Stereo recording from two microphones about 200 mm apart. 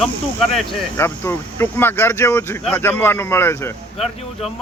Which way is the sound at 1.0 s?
10° left (ahead or behind).